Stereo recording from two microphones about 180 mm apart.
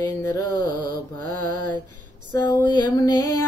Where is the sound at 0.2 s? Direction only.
20° left (ahead or behind).